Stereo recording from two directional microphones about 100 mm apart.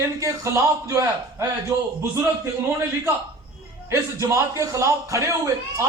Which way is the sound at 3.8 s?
30° right (ahead or behind).